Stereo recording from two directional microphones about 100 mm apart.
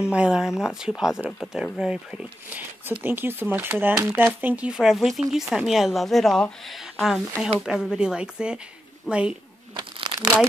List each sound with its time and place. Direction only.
0.0 s speech: 10° right (ahead or behind)
3.0 s speech: 20° right (ahead or behind)
10.1 s crumpling: 40° right (ahead or behind)